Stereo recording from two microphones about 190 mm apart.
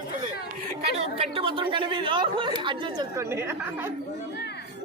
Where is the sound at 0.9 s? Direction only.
30° right (ahead or behind); by 3.4 s 15° right (ahead or behind).